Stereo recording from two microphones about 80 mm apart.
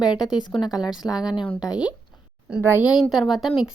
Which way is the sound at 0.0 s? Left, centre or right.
Left.